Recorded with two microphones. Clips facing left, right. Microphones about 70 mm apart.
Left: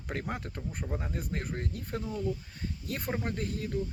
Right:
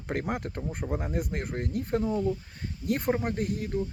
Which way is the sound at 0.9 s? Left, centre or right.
Right.